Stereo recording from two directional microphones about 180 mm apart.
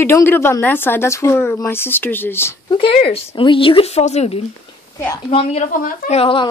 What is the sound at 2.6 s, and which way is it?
Speech, 30° left (ahead or behind).